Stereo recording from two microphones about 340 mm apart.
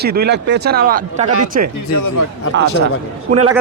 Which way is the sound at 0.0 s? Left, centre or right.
Right.